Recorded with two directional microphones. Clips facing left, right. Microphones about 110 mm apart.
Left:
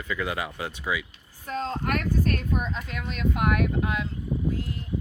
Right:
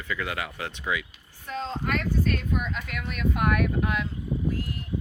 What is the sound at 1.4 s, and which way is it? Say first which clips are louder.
Speech: left 2 dB; 40° left (ahead or behind).